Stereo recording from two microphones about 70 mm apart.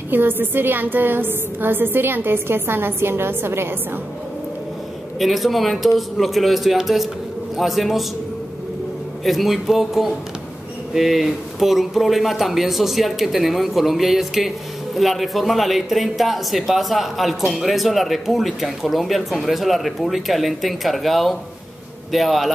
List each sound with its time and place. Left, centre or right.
0.1 s a woman's voice: right
5.2 s speech: centre
9.2 s speech: centre